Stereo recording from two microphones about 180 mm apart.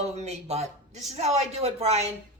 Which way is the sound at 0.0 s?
35° right (ahead or behind).